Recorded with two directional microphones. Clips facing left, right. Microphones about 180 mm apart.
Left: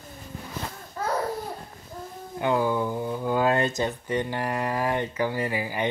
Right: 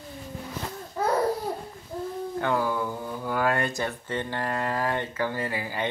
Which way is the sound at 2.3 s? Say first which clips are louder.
Left 3 dB; 15° left (ahead or behind).